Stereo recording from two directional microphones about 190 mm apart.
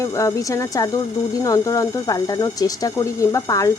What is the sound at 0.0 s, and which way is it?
Speech, 15° left (ahead or behind).